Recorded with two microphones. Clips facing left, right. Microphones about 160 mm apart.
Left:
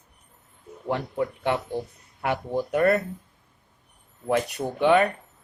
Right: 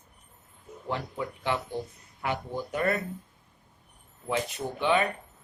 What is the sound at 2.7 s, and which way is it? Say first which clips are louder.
Speech: left 7 dB; 60° left (ahead or behind).